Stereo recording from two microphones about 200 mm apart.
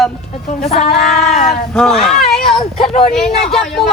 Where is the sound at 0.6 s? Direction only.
35° left (ahead or behind).